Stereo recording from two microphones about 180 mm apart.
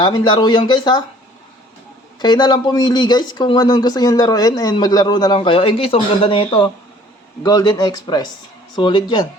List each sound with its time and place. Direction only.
0.0 s speech: 25° left (ahead or behind)
2.1 s speech: 25° left (ahead or behind)